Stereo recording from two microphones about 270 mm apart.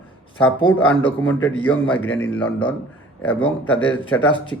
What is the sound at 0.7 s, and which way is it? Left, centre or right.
Speech, centre.